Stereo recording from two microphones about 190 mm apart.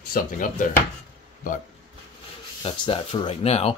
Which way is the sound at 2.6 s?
25° left (ahead or behind).